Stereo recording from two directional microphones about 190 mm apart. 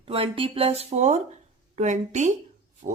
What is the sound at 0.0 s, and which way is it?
Speech, 30° right (ahead or behind).